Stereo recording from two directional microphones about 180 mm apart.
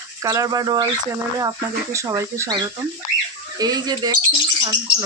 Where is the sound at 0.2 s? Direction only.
20° right (ahead or behind).